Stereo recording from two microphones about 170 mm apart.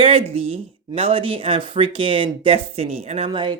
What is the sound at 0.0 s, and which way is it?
Speech, 35° right (ahead or behind).